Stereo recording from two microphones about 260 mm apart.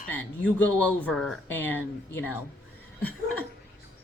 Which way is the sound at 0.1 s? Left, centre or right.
Centre.